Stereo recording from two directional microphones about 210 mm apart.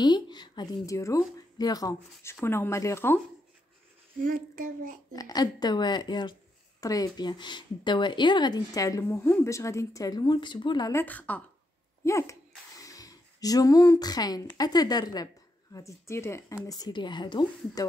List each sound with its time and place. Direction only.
0.0 s a woman's voice: 20° left (ahead or behind)
4.2 s speech: 40° right (ahead or behind)
5.1 s a woman's voice: 20° left (ahead or behind)